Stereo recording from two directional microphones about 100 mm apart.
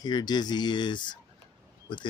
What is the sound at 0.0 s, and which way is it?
Speech, 45° left (ahead or behind).